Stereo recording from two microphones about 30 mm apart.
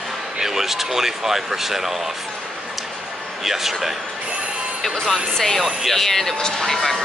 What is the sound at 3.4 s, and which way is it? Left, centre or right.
Speech, centre.